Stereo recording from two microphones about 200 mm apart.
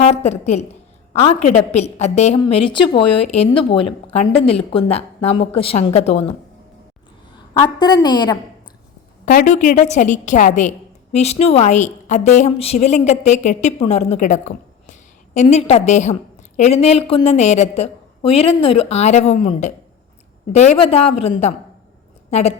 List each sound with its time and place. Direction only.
0.0 s a woman's voice: 30° left (ahead or behind)
7.8 s speech: 20° left (ahead or behind)
9.2 s a woman's voice: 40° left (ahead or behind)